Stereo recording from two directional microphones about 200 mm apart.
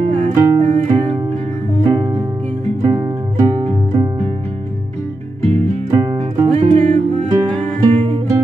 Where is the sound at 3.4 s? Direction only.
20° right (ahead or behind).